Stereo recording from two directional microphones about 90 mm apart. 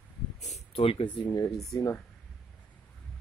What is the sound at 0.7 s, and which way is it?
Speech, 90° left.